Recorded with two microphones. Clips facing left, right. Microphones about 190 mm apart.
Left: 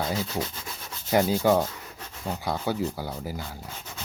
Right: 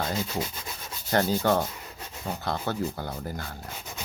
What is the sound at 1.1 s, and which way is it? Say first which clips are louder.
Speech: left 2 dB; 10° left (ahead or behind).